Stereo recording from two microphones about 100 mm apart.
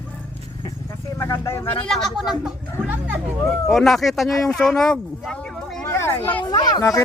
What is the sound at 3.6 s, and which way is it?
Speech, centre (ahead or behind).